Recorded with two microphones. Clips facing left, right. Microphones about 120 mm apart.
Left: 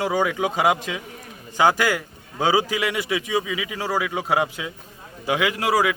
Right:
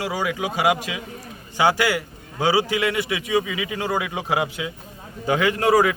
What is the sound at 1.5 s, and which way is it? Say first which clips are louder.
Speech: even; 15° right (ahead or behind).